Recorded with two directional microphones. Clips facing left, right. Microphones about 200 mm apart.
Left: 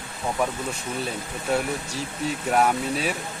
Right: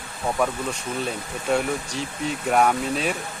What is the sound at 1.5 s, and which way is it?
Speech, 5° left (ahead or behind).